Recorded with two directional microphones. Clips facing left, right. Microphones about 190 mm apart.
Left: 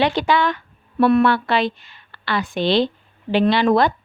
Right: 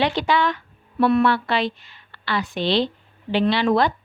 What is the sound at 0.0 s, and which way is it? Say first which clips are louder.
A woman's voice: left 2 dB; 50° left (ahead or behind).